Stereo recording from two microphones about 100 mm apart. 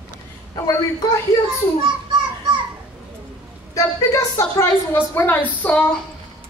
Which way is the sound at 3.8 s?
35° left (ahead or behind).